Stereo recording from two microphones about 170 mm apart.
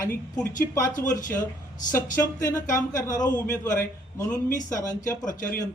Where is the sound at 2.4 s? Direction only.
50° left (ahead or behind).